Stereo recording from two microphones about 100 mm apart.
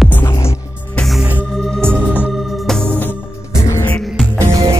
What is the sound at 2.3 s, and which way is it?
Music, centre (ahead or behind).